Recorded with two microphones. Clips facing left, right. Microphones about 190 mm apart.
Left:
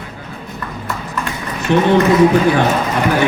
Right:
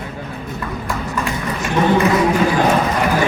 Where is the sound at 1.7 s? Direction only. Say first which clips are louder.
Left 4 dB; 70° left (ahead or behind).